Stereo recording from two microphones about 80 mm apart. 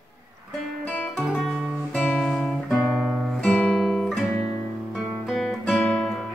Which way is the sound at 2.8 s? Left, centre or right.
Centre.